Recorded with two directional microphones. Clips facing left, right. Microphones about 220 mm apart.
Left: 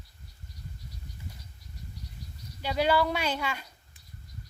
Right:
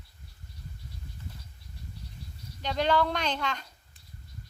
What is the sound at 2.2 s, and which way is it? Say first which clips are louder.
Insect: even; 30° right (ahead or behind).